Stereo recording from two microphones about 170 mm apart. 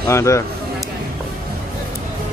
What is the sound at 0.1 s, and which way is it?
Speech, 15° left (ahead or behind).